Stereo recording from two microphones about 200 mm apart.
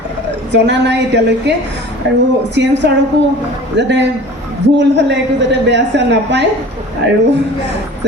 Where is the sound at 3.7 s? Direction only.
60° right (ahead or behind).